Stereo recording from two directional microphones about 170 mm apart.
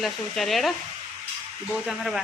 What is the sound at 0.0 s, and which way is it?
Speech, centre (ahead or behind).